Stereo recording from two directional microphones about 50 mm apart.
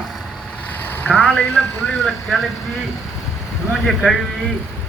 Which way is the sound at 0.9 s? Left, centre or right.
Left.